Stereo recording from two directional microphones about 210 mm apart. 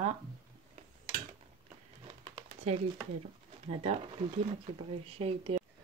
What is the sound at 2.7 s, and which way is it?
A woman's voice, 30° right (ahead or behind).